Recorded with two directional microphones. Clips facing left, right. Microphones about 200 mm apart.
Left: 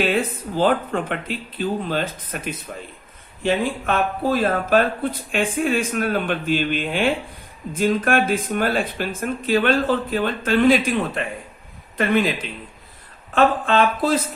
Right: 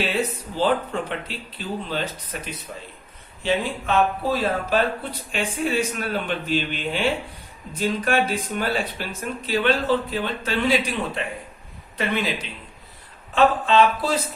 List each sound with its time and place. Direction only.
0.1 s speech: 50° left (ahead or behind)